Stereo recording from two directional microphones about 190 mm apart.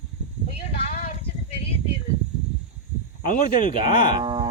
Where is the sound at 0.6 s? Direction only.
35° left (ahead or behind).